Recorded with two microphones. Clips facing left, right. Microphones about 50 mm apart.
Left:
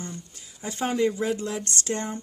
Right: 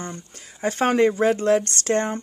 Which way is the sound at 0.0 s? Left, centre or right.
Right.